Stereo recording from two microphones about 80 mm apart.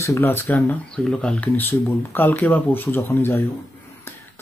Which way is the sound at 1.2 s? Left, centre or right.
Centre.